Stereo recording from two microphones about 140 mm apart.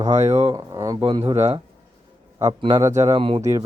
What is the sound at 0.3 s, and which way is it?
Speech, 20° right (ahead or behind).